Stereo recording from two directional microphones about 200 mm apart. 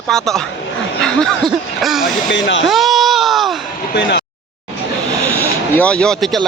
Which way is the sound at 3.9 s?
55° left (ahead or behind).